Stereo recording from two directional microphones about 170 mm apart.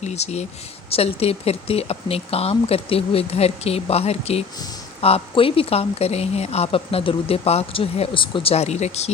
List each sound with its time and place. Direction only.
0.0 s speech: 40° left (ahead or behind)